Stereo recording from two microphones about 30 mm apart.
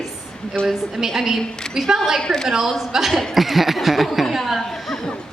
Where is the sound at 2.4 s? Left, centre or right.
Centre.